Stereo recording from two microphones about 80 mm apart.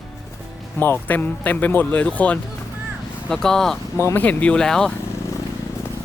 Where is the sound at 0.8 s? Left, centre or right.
Left.